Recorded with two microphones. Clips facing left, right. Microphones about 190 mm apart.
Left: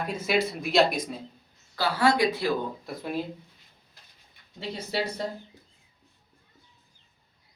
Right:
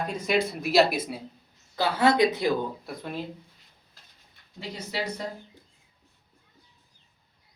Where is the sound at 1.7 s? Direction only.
20° right (ahead or behind).